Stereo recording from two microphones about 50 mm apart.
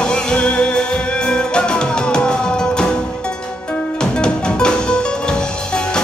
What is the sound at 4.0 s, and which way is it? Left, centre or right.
Music, centre.